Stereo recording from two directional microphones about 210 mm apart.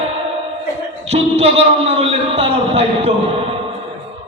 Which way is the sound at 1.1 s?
30° right (ahead or behind).